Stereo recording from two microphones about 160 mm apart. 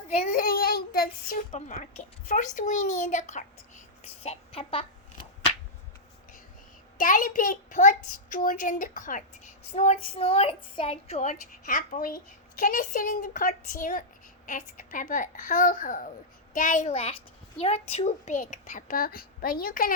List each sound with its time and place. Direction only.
0.3 s child singing: 65° left (ahead or behind)
1.5 s a child's voice: 50° left (ahead or behind)
7.0 s a child's voice: 60° left (ahead or behind)